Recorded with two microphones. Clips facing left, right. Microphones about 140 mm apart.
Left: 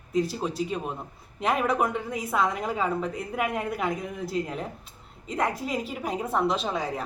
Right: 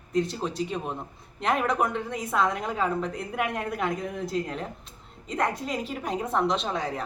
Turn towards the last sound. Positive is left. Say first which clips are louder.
# even
turn(degrees=5)  # may be behind; listen again after turning